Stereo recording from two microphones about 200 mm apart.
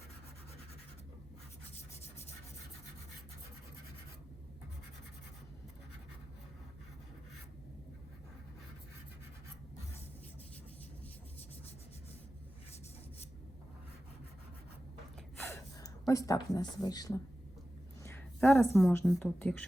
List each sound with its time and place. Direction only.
15.4 s speech: 15° left (ahead or behind)
18.0 s a sound: 10° left (ahead or behind)
18.8 s speech: 5° left (ahead or behind)